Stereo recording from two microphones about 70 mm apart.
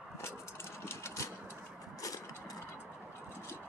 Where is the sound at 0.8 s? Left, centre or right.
Left.